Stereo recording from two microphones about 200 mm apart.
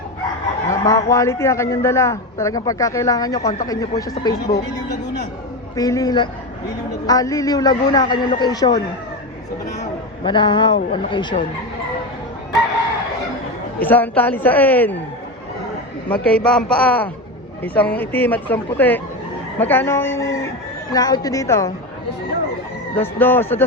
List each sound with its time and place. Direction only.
0.7 s fowl: 15° left (ahead or behind)
1.1 s a man's voice: 15° left (ahead or behind)
5.7 s a man's voice: 20° left (ahead or behind)
10.2 s a man's voice: 25° left (ahead or behind)
13.7 s a man's voice: 10° left (ahead or behind)
16.0 s a man's voice: 5° left (ahead or behind)
23.0 s a man's voice: 10° left (ahead or behind)